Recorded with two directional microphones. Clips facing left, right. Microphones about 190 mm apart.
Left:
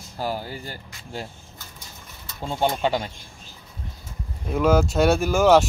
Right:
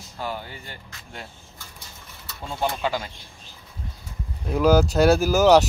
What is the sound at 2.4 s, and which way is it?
Speech, 30° left (ahead or behind).